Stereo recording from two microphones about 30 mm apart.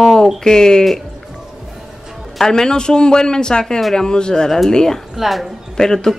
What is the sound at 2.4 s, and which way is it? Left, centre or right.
Speech, left.